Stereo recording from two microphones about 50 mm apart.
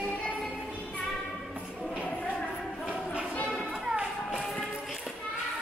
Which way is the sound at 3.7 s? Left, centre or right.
Centre.